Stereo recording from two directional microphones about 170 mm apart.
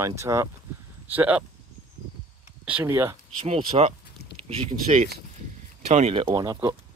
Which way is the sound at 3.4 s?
35° right (ahead or behind).